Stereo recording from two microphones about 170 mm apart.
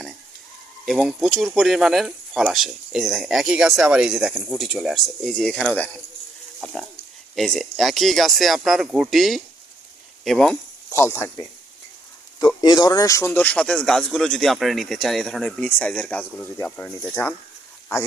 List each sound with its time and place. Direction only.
0.9 s speech: centre (ahead or behind)
7.3 s speech: centre (ahead or behind)
10.9 s speech: 15° left (ahead or behind)